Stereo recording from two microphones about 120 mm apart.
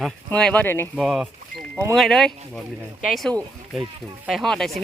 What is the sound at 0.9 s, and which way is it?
Speech, 5° right (ahead or behind).